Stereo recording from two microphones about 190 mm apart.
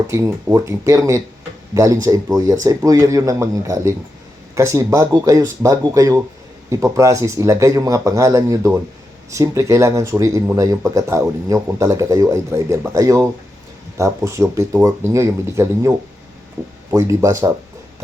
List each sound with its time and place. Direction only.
0.1 s speech: 15° right (ahead or behind)